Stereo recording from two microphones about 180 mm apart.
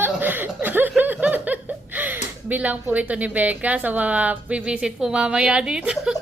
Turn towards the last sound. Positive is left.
turn(degrees=-5)  # may be behind; listen again after turning